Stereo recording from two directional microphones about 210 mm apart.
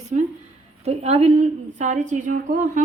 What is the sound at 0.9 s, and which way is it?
Speech, 30° right (ahead or behind).